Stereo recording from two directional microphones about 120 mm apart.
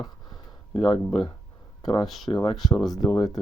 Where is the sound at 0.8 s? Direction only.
50° left (ahead or behind).